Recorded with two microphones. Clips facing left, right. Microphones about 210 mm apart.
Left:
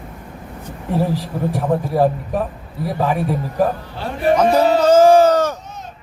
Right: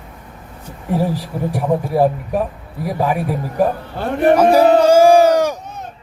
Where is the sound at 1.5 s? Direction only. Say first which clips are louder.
Right 1 dB; 10° right (ahead or behind).